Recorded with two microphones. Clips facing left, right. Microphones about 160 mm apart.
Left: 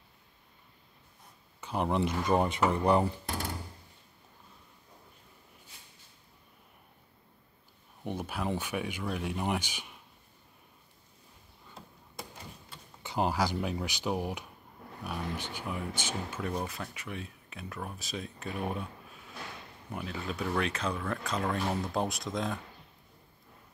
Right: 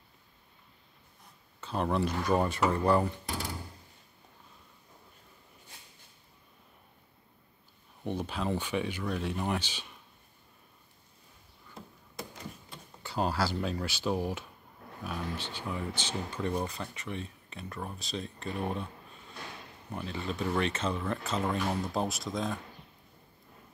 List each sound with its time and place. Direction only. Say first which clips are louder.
1.6 s speech: even; 15° left (ahead or behind)
8.0 s speech: right 1 dB; 10° left (ahead or behind)
13.0 s speech: left 1 dB; 15° left (ahead or behind); by 22.6 s centre (ahead or behind)